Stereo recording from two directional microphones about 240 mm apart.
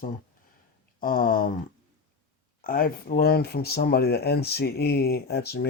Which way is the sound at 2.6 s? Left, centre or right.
Left.